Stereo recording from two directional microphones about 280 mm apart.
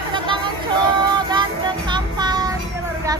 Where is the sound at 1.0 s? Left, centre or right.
Centre.